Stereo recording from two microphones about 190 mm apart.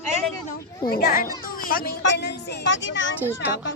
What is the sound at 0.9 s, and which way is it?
Speech, 50° left (ahead or behind).